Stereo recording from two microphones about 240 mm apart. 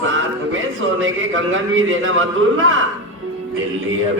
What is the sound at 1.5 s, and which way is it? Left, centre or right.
Speech, right.